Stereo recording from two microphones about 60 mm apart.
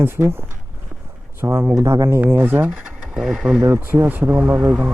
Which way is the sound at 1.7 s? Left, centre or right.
Right.